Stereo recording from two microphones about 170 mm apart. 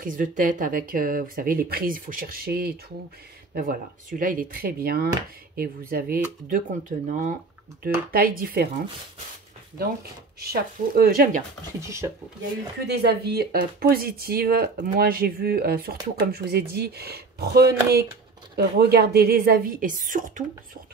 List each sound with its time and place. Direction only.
0.0 s speech: 50° right (ahead or behind)
6.5 s speech: 50° right (ahead or behind)
8.1 s speech: 60° right (ahead or behind)
10.4 s speech: 65° right (ahead or behind)
12.8 s speech: 75° right (ahead or behind); by 20.4 s 50° right (ahead or behind)